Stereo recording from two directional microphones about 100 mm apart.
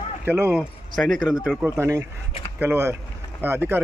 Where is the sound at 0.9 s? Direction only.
Centre (ahead or behind).